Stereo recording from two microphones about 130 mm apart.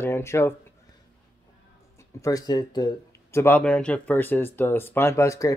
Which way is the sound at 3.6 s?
10° left (ahead or behind).